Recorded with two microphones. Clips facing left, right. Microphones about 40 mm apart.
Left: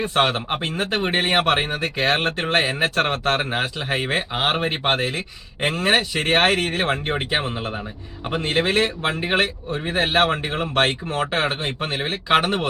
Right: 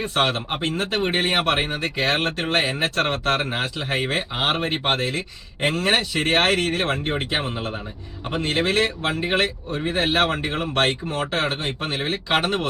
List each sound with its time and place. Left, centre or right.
0.0 s speech: centre